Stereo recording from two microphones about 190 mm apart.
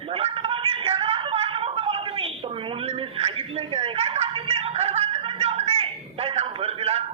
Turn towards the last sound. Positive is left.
turn(degrees=-30)  # may be behind; listen again after turning